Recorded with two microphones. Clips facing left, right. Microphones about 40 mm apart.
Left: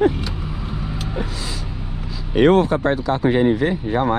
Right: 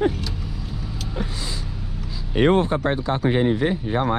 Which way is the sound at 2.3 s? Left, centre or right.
Left.